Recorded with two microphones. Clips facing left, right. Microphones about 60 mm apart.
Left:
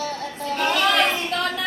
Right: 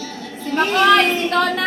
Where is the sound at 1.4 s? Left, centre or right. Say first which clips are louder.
Right 10 dB; right.